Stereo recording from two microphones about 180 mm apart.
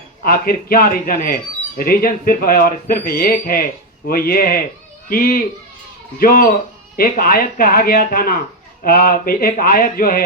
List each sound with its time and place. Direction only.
0.3 s speech: 55° left (ahead or behind)